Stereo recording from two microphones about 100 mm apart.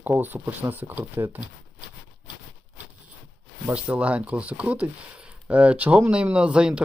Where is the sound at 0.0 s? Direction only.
20° right (ahead or behind).